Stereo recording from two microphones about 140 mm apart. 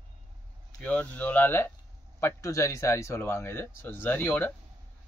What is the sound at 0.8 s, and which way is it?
Speech, 10° left (ahead or behind).